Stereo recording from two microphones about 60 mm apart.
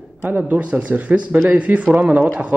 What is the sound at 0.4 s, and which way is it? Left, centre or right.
Speech, right.